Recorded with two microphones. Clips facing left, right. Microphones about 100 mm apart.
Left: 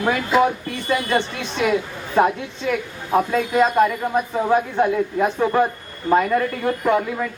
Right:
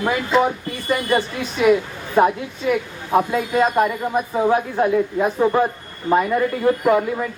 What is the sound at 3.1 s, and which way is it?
Speech, 15° right (ahead or behind).